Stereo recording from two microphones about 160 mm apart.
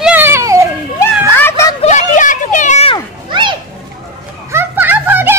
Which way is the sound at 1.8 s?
50° left (ahead or behind).